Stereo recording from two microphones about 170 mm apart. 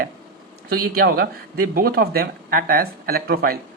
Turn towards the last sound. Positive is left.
turn(degrees=-65)  # may be behind; listen again after turning